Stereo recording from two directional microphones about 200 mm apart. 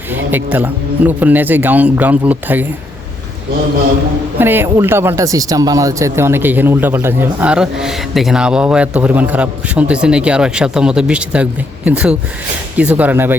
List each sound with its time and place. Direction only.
0.1 s speech: 10° right (ahead or behind)
4.4 s speech: 10° right (ahead or behind)